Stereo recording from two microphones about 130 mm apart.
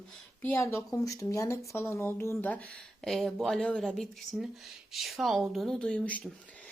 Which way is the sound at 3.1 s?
Centre (ahead or behind).